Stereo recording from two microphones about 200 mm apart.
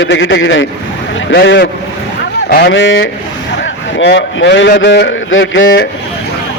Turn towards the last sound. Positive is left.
turn(degrees=70)  # may be behind; listen again after turning